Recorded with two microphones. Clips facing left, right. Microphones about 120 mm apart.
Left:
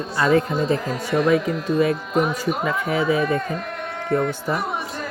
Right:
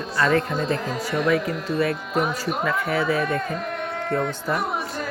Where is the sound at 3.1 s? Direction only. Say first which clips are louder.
Left 3 dB; 5° left (ahead or behind).